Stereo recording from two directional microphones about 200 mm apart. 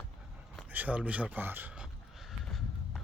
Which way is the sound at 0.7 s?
10° right (ahead or behind).